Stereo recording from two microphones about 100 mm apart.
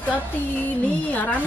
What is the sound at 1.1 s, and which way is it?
Speech, 15° left (ahead or behind).